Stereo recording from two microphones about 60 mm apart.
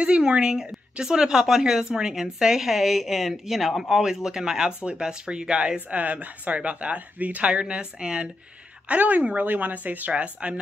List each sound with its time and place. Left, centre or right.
0.0 s speech: centre